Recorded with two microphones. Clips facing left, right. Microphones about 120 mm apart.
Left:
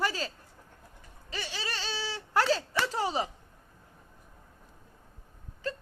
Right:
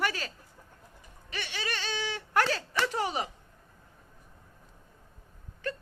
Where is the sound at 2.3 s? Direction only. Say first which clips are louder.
Left 2 dB; 20° left (ahead or behind).